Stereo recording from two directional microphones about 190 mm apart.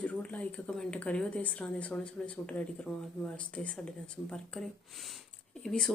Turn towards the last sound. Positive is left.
turn(degrees=5)  # may be behind; listen again after turning